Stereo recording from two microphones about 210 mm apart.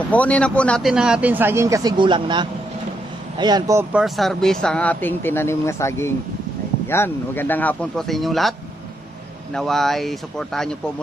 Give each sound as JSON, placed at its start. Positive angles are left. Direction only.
{"t": 0.1, "sound": "speech", "side_deg": 5}
{"t": 4.0, "sound": "speech", "side_deg": 0}